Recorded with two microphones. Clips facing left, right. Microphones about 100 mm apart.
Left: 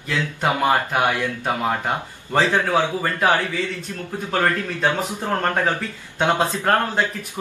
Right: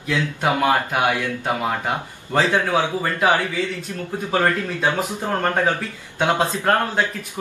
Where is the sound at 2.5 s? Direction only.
10° right (ahead or behind).